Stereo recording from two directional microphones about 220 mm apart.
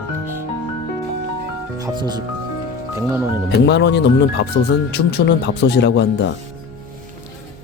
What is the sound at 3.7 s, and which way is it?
Speech, 50° left (ahead or behind).